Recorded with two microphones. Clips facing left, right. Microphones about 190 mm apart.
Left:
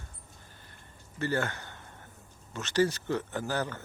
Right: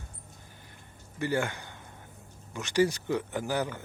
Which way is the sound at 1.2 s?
15° right (ahead or behind).